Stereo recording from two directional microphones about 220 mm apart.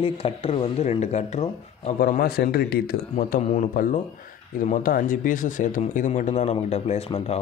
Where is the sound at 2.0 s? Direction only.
45° left (ahead or behind).